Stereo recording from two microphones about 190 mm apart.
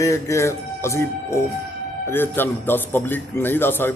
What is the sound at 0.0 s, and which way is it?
A man's voice, 15° left (ahead or behind).